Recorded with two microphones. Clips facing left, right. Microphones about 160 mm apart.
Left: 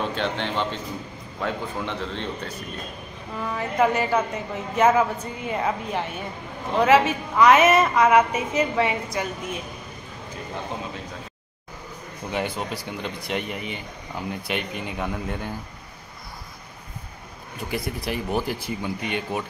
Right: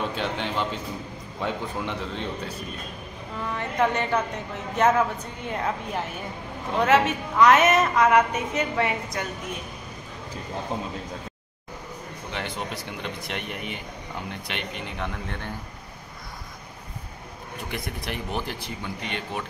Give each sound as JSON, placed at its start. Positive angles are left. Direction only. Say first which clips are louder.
{"t": 0.1, "sound": "a woman's voice", "louder": "left 2 dB", "side_deg": -5}
{"t": 3.4, "sound": "a woman's voice", "louder": "left 3 dB", "side_deg": 5}
{"t": 10.7, "sound": "speech", "louder": "right 4 dB", "side_deg": -35}
{"t": 12.3, "sound": "a woman's voice", "louder": "left 5 dB", "side_deg": 10}
{"t": 14.5, "sound": "speech", "louder": "left 5 dB", "side_deg": 10}
{"t": 17.6, "sound": "speech", "louder": "left 5 dB", "side_deg": 5}